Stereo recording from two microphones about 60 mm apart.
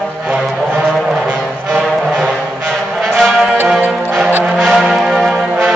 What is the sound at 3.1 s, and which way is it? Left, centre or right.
Music, centre.